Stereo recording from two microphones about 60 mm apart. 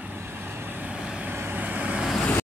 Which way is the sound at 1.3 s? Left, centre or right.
Right.